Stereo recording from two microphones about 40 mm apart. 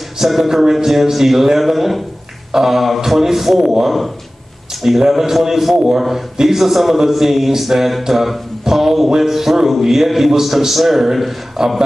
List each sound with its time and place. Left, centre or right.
0.2 s a man's voice: centre